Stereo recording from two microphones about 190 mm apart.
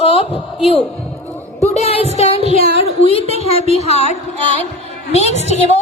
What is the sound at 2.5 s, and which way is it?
A woman's voice, 30° left (ahead or behind).